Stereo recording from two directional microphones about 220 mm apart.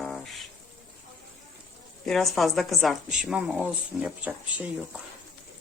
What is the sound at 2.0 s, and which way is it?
A woman's voice, centre (ahead or behind).